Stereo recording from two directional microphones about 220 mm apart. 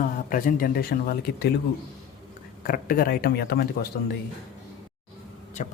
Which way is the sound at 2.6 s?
40° left (ahead or behind).